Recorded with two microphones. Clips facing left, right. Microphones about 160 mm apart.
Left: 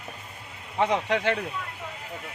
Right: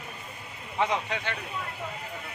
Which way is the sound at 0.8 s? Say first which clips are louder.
Left 5 dB; 70° left (ahead or behind).